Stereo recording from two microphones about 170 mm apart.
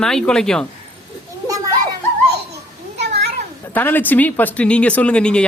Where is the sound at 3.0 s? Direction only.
75° right (ahead or behind).